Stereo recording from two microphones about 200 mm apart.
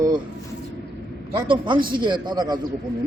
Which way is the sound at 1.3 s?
25° right (ahead or behind).